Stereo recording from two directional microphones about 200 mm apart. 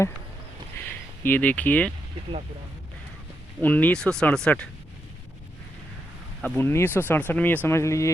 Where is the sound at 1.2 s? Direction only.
10° left (ahead or behind).